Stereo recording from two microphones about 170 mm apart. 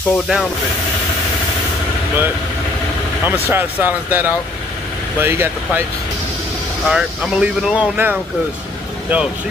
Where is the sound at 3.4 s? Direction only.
10° right (ahead or behind).